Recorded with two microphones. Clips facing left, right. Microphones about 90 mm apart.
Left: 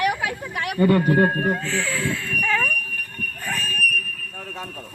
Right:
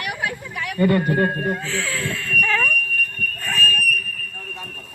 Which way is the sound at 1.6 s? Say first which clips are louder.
Left 1 dB; centre (ahead or behind).